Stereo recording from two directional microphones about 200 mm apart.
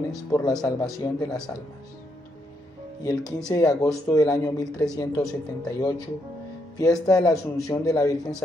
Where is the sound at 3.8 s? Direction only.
15° left (ahead or behind).